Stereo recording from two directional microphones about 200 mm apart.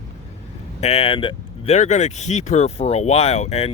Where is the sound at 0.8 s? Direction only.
30° left (ahead or behind).